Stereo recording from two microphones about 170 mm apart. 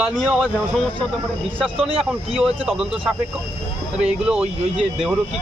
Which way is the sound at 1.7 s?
35° right (ahead or behind).